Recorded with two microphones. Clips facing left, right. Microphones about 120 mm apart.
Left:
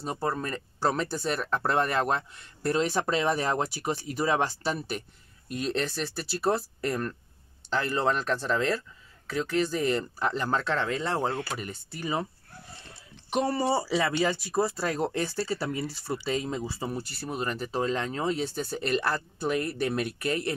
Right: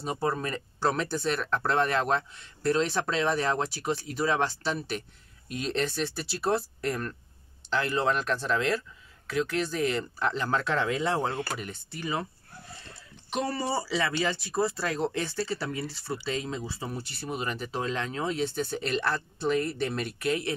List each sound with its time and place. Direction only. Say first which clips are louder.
0.0 s speech: right 1 dB; centre (ahead or behind)
13.3 s speech: left 4 dB; 20° left (ahead or behind); by 20.5 s centre (ahead or behind)